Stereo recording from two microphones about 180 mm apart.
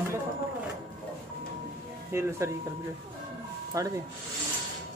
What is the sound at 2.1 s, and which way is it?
Speech, 15° right (ahead or behind).